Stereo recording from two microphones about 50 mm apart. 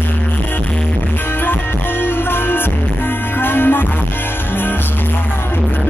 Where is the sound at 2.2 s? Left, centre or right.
Left.